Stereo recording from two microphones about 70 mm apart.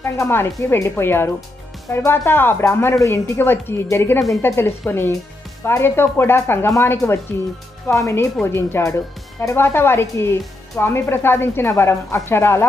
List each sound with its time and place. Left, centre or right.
0.0 s speech: left